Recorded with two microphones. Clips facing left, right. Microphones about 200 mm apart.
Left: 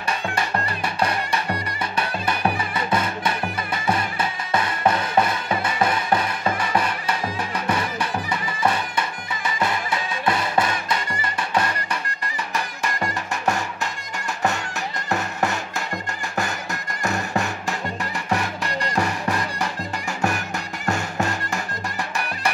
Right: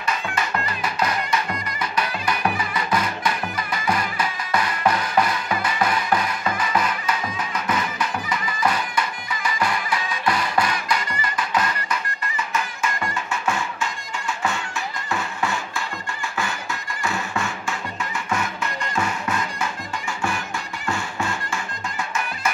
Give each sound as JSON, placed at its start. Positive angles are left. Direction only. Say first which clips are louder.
{"t": 0.0, "sound": "music", "louder": "even", "side_deg": 30}
{"t": 15.4, "sound": "music", "louder": "left 1 dB", "side_deg": 40}
{"t": 17.0, "sound": "music", "louder": "left 3 dB", "side_deg": 40}